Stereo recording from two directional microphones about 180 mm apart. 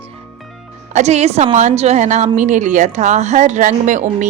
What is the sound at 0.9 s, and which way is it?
A woman's voice, 40° right (ahead or behind).